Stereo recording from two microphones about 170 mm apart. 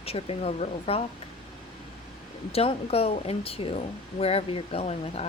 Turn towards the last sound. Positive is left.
turn(degrees=40)  # may be behind; listen again after turning